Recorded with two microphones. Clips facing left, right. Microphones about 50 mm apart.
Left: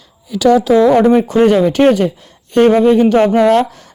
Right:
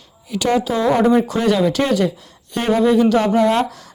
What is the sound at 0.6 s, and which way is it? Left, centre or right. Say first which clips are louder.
Speech: left 7 dB; left.